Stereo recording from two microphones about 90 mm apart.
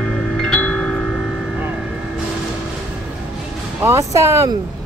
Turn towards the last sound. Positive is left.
turn(degrees=-30)  # may be behind; listen again after turning